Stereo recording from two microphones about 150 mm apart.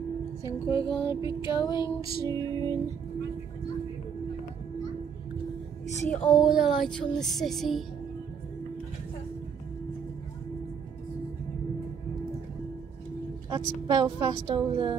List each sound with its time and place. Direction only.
0.5 s a woman's voice: 20° right (ahead or behind)
0.8 s a sound: 35° left (ahead or behind)
2.2 s a woman's voice: 25° right (ahead or behind)
6.0 s speech: centre (ahead or behind)
13.5 s a woman's voice: 25° right (ahead or behind)